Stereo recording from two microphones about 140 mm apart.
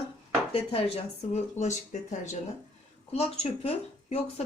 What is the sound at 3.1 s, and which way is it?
Speech, 45° left (ahead or behind).